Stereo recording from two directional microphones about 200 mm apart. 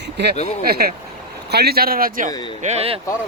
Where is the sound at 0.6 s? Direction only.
50° right (ahead or behind).